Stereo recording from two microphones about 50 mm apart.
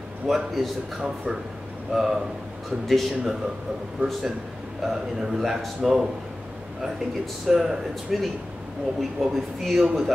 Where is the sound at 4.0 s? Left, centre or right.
Right.